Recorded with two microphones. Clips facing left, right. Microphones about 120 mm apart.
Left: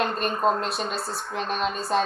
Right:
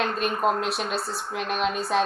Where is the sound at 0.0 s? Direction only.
5° right (ahead or behind).